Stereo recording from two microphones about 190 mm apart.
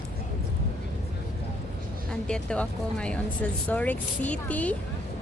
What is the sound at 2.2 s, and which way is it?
Speech, 5° left (ahead or behind).